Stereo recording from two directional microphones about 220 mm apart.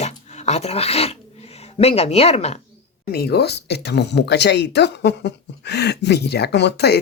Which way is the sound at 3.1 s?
45° left (ahead or behind).